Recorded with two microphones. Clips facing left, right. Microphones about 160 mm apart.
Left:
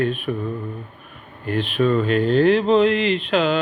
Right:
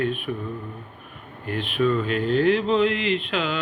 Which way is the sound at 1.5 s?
35° left (ahead or behind).